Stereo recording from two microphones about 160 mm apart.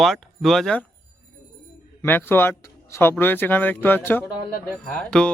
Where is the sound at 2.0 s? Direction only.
15° left (ahead or behind).